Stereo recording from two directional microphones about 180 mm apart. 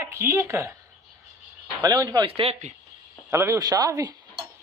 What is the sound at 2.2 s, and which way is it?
Speech, 30° right (ahead or behind).